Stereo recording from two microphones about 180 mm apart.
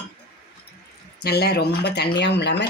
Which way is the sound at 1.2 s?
65° left (ahead or behind).